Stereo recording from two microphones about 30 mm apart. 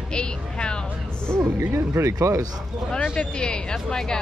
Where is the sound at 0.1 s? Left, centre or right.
Left.